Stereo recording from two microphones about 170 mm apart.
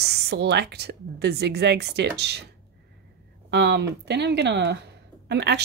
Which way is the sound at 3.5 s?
90° right.